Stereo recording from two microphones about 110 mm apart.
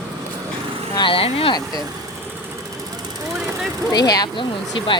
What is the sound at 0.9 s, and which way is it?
Speech, 50° left (ahead or behind).